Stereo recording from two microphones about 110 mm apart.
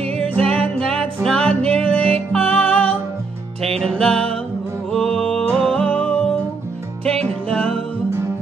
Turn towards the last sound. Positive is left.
turn(degrees=5)  # may be behind; listen again after turning